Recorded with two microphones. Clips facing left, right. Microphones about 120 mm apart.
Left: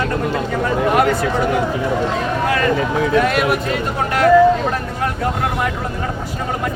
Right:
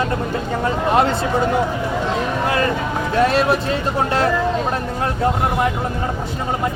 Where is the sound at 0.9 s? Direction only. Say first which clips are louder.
Even; 25° right (ahead or behind).